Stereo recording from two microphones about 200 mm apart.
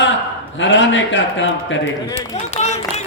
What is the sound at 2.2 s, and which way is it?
Speech, 35° left (ahead or behind).